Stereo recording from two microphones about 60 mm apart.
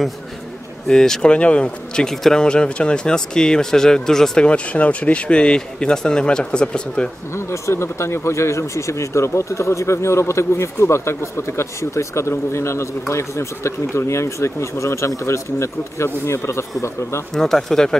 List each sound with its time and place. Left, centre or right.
0.8 s speech: centre
4.5 s speech: left
7.3 s speech: left
17.3 s speech: centre